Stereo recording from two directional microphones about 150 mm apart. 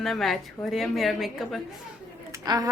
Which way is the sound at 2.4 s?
25° right (ahead or behind).